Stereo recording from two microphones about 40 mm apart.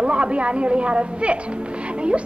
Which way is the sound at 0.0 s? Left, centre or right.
Right.